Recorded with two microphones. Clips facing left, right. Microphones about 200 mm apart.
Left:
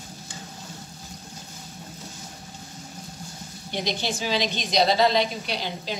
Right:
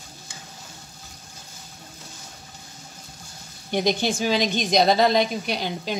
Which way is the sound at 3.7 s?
50° right (ahead or behind).